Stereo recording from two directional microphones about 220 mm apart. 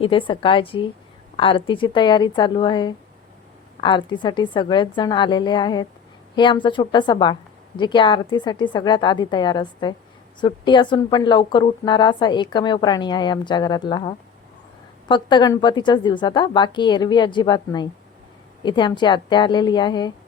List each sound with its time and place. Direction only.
0.0 s speech: 25° left (ahead or behind)